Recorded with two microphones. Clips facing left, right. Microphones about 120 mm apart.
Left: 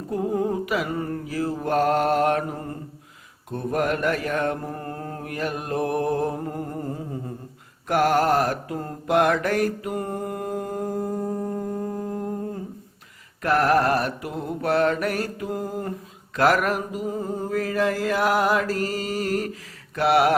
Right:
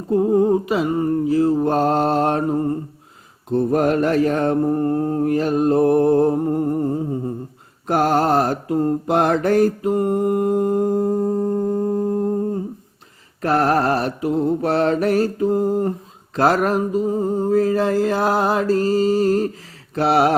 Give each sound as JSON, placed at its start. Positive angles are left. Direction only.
{"t": 0.1, "sound": "mantra", "side_deg": -25}
{"t": 13.4, "sound": "mantra", "side_deg": -30}